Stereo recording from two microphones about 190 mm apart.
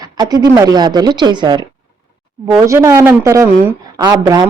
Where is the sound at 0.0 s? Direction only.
20° right (ahead or behind).